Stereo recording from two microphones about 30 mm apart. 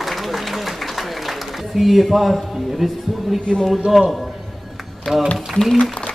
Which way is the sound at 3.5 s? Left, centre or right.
Left.